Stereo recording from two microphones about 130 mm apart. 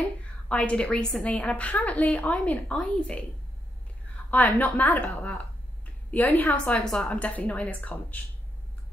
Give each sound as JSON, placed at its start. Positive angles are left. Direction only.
{"t": 0.5, "sound": "a woman's voice", "side_deg": 10}
{"t": 4.3, "sound": "a woman's voice", "side_deg": 10}